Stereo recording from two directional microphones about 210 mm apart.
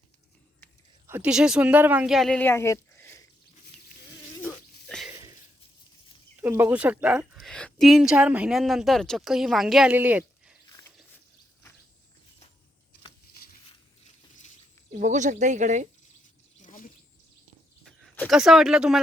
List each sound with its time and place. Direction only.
1.0 s speech: 10° right (ahead or behind); by 3.2 s 10° left (ahead or behind)
4.4 s a sound: centre (ahead or behind)
6.3 s a woman's voice: 10° right (ahead or behind)
14.9 s speech: 35° right (ahead or behind)
16.6 s a sound: 40° left (ahead or behind)
17.8 s speech: centre (ahead or behind)